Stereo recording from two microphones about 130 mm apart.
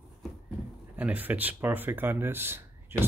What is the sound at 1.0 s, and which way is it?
Speech, 10° right (ahead or behind).